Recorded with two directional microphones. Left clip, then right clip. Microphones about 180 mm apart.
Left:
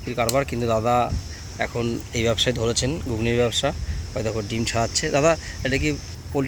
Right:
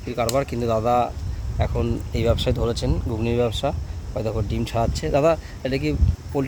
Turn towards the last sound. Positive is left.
turn(degrees=-5)  # may be behind; listen again after turning